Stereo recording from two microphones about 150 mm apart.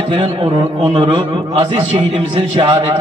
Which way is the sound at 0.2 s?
35° right (ahead or behind).